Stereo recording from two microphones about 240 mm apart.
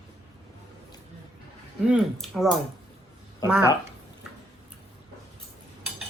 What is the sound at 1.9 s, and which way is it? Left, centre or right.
Speech, centre.